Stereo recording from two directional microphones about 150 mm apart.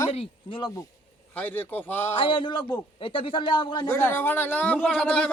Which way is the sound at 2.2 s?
35° left (ahead or behind).